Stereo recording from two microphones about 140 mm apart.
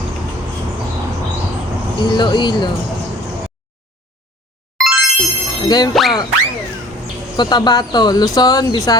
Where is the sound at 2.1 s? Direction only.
35° left (ahead or behind).